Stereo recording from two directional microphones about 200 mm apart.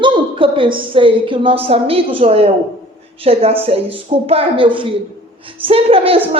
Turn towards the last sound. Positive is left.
turn(degrees=-30)  # may be behind; listen again after turning